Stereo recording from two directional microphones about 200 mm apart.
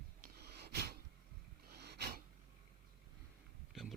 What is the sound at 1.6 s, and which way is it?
Snort, 55° right (ahead or behind).